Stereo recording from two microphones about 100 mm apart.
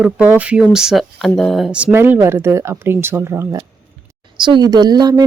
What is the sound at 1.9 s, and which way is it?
Speech, 25° right (ahead or behind).